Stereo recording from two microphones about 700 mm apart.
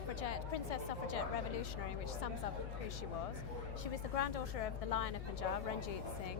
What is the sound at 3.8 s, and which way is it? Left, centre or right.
A woman's voice, left.